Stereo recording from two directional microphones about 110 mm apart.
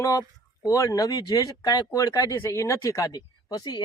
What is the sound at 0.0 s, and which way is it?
Speech, 30° left (ahead or behind).